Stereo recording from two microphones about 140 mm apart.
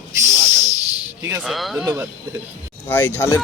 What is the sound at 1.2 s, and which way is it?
Speech, 20° right (ahead or behind).